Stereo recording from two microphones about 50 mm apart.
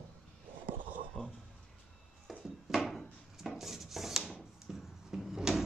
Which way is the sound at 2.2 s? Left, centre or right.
Centre.